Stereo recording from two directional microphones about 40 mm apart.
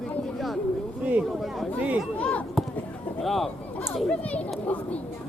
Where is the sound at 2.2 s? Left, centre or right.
Left.